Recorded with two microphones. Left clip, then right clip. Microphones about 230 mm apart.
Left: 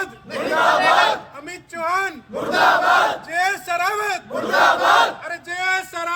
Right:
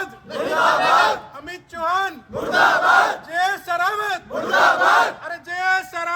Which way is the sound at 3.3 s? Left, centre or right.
Left.